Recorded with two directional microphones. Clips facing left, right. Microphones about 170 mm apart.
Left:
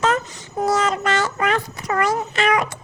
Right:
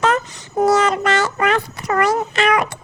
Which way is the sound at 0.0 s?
70° right (ahead or behind).